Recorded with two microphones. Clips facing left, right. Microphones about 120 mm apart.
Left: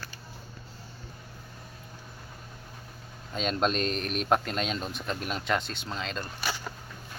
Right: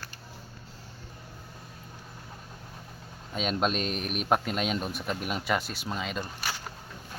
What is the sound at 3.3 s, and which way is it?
Speech, 5° right (ahead or behind).